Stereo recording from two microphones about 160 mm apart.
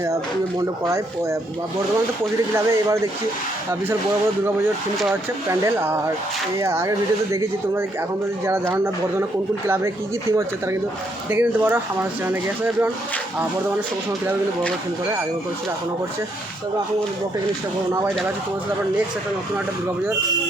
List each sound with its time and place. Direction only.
0.9 s speech: 20° right (ahead or behind)
2.6 s speech: 15° right (ahead or behind)
5.5 s speech: 15° right (ahead or behind)
8.4 s speech: 15° right (ahead or behind)
11.3 s speech: 10° right (ahead or behind)